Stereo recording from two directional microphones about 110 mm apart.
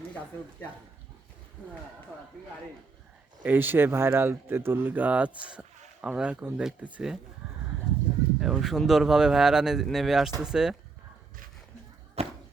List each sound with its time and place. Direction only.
3.4 s speech: 15° right (ahead or behind)
8.4 s speech: 5° right (ahead or behind)
12.2 s a sound: 70° right (ahead or behind)